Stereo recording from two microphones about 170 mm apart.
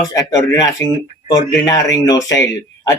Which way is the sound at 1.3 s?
20° left (ahead or behind).